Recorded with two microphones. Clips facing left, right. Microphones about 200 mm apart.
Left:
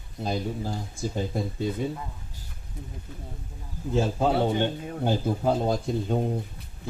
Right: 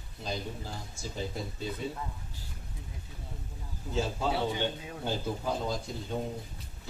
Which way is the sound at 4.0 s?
55° left (ahead or behind).